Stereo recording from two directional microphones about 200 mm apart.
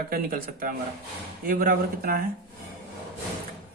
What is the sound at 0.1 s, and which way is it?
Speech, 45° right (ahead or behind).